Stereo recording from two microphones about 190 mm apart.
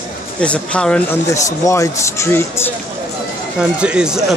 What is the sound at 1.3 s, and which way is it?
Speech, 15° left (ahead or behind).